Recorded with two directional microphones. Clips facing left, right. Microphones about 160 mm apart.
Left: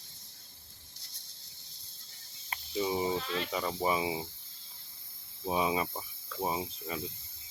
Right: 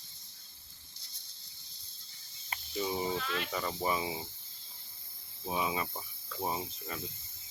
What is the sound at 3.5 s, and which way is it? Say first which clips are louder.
Speech: left 3 dB; 10° left (ahead or behind).